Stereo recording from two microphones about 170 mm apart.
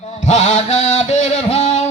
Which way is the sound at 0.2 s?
45° left (ahead or behind).